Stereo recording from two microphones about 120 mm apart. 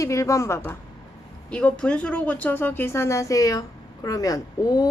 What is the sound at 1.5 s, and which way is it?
A woman's voice, 10° left (ahead or behind).